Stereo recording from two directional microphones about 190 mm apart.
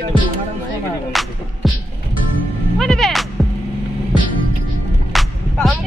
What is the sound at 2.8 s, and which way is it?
Music, centre (ahead or behind).